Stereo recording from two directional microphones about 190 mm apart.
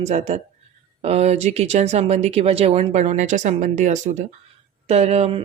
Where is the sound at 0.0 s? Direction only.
35° right (ahead or behind).